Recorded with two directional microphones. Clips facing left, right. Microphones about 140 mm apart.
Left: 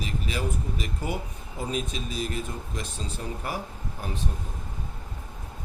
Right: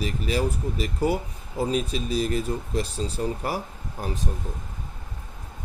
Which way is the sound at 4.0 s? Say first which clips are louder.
Right 5 dB; 40° right (ahead or behind).